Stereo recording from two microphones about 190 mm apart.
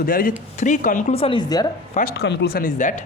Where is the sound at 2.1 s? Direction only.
65° left (ahead or behind); by 3.0 s 40° left (ahead or behind).